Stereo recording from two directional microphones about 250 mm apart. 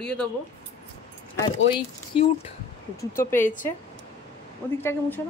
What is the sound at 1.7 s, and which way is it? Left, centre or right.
Speech, left.